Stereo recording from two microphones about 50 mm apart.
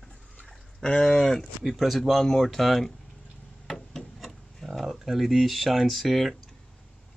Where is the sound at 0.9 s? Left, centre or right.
Centre.